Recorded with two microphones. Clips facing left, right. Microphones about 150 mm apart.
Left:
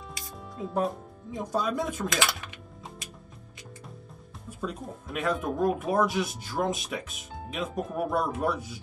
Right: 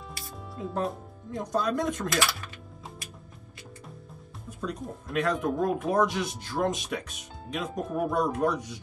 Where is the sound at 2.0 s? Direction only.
20° left (ahead or behind).